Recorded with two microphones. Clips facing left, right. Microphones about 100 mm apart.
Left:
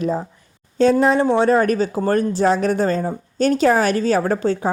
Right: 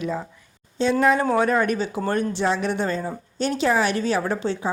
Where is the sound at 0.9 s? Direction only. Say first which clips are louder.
Left 3 dB; 30° left (ahead or behind).